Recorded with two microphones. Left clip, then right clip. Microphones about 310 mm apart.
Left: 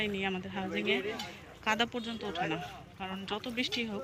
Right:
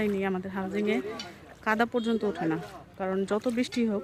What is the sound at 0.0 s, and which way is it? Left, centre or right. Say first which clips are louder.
Speech: right 5 dB; centre.